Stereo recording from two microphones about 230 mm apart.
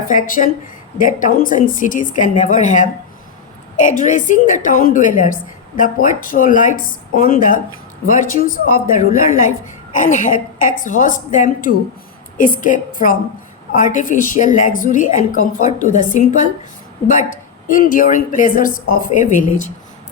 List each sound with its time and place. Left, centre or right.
0.1 s a woman's voice: left